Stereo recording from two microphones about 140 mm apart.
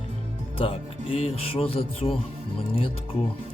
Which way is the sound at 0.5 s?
45° left (ahead or behind).